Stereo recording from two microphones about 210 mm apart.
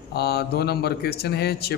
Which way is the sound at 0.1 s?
50° left (ahead or behind).